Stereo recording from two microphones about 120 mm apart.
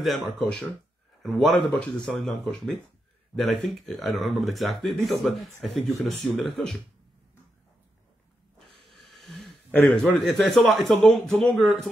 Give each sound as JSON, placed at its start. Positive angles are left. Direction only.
{"t": 0.0, "sound": "speech", "side_deg": 0}
{"t": 8.9, "sound": "a sound", "side_deg": 0}
{"t": 10.8, "sound": "speech", "side_deg": 5}